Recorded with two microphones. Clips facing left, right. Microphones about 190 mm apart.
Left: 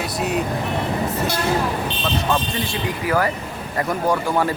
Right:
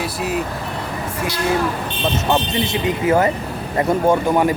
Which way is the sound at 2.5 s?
20° right (ahead or behind).